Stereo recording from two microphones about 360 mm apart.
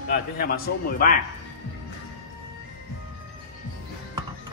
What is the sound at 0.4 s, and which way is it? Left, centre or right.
Speech, left.